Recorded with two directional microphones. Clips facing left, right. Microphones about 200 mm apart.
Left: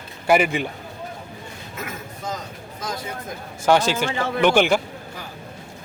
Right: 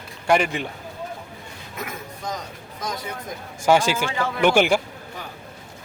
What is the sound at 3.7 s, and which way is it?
A man's voice, 10° right (ahead or behind).